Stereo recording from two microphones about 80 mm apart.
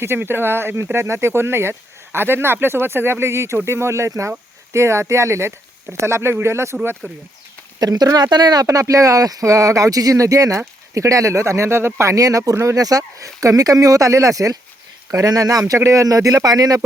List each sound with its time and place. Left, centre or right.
0.0 s speech: right
7.8 s speech: right
8.6 s speech: right